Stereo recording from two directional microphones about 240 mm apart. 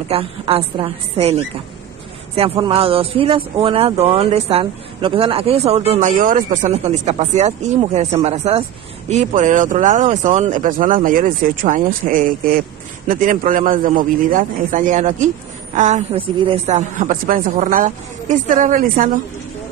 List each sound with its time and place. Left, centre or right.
0.1 s a man's voice: right